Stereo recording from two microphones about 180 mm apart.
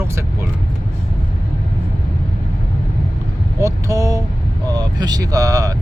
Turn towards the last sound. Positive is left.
turn(degrees=-20)  # may be behind; listen again after turning